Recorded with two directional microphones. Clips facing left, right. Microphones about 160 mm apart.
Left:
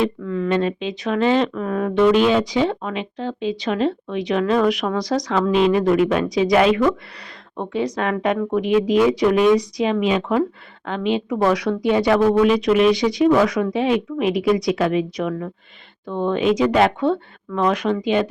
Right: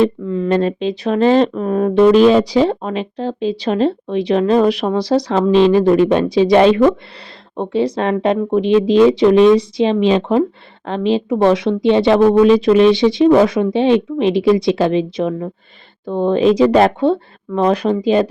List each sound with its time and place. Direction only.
0.0 s speech: 30° right (ahead or behind)